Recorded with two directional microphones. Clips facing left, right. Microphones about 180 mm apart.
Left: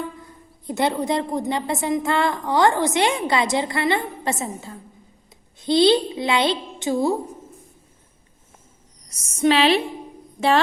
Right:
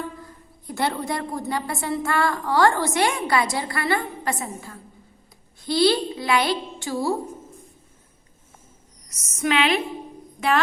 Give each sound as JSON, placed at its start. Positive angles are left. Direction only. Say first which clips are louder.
{"t": 0.7, "sound": "a woman's voice", "louder": "left 4 dB", "side_deg": 20}
{"t": 9.0, "sound": "a woman's voice", "louder": "left 6 dB", "side_deg": 30}